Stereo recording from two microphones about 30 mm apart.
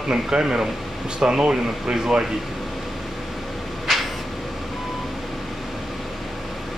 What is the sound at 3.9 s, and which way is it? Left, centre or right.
Vehicle, centre.